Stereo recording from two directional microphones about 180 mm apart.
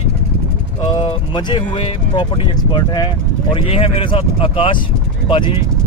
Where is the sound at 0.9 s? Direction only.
25° left (ahead or behind).